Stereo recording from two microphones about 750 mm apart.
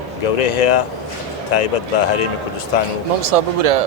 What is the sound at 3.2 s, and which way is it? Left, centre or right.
Speech, right.